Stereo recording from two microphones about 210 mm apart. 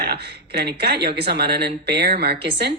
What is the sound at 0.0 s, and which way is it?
Speech, 50° right (ahead or behind).